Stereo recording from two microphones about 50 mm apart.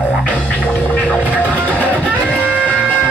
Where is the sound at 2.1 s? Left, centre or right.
Right.